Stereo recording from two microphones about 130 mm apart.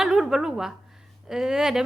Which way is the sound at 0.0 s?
5° right (ahead or behind).